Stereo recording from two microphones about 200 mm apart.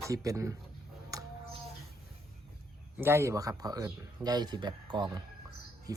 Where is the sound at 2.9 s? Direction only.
10° right (ahead or behind).